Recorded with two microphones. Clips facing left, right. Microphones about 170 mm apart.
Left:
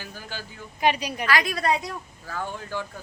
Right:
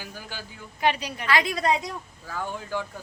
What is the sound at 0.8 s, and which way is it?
Speech, 15° left (ahead or behind).